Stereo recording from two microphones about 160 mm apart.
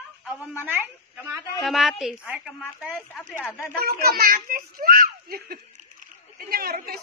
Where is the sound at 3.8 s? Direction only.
70° right (ahead or behind).